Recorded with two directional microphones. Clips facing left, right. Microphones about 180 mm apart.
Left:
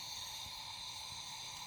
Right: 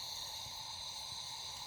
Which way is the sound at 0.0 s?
40° right (ahead or behind).